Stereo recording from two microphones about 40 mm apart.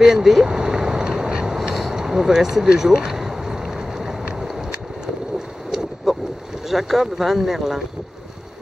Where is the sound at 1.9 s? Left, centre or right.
Centre.